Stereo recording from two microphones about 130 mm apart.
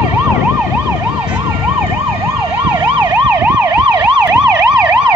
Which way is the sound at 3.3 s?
15° right (ahead or behind).